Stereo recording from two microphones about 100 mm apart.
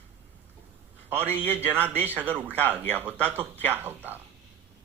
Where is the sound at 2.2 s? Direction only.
15° right (ahead or behind).